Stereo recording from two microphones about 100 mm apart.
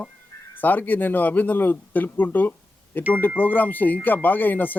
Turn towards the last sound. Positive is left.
turn(degrees=20)  # may be behind; listen again after turning